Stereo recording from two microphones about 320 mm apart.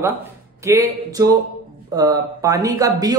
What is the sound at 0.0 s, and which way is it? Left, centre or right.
Speech, centre.